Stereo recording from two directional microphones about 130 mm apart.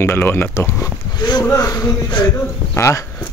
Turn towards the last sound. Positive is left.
turn(degrees=20)  # may be behind; listen again after turning